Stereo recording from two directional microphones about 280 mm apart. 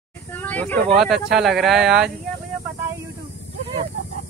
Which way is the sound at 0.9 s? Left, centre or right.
Centre.